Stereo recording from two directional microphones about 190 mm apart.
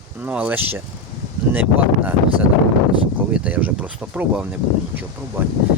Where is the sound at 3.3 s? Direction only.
5° right (ahead or behind).